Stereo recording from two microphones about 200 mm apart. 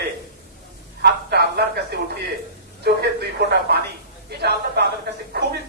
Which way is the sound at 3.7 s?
55° right (ahead or behind).